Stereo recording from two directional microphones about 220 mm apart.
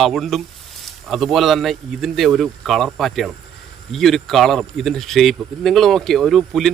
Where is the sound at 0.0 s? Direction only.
Centre (ahead or behind).